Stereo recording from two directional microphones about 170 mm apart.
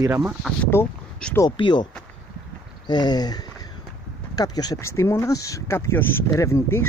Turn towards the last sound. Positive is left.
turn(degrees=15)  # may be behind; listen again after turning